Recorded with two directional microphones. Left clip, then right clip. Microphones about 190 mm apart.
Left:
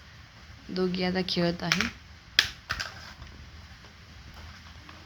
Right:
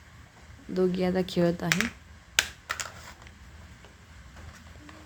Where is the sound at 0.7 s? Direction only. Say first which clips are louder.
Right 2 dB; 25° right (ahead or behind).